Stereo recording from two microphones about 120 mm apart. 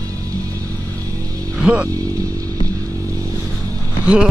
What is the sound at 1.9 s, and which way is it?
Vehicle, 30° right (ahead or behind).